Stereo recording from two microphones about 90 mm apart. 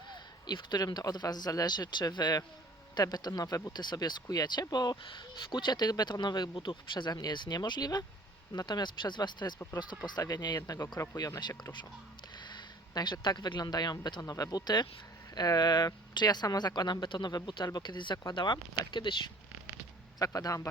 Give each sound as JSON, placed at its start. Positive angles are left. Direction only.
{"t": 0.4, "sound": "speech", "side_deg": 50}
{"t": 5.0, "sound": "speech", "side_deg": 60}
{"t": 7.1, "sound": "speech", "side_deg": 50}
{"t": 12.9, "sound": "speech", "side_deg": 50}
{"t": 20.1, "sound": "a man's voice", "side_deg": 40}